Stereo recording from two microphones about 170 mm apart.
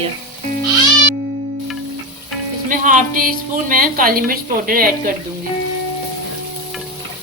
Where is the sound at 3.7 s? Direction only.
55° right (ahead or behind).